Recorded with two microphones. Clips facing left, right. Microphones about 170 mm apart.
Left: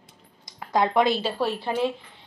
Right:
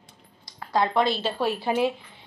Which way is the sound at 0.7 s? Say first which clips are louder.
Left 2 dB; 15° left (ahead or behind).